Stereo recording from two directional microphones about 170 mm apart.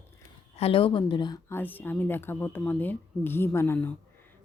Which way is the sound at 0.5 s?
35° left (ahead or behind).